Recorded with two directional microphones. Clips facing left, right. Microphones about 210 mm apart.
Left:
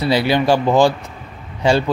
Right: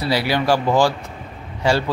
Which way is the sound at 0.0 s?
20° left (ahead or behind).